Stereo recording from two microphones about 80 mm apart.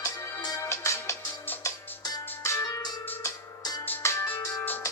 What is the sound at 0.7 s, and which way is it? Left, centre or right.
Music, left.